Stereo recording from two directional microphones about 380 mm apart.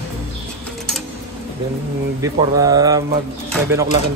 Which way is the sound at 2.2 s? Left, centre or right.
Centre.